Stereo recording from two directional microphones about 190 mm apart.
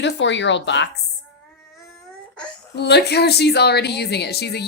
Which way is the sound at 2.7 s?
60° left (ahead or behind).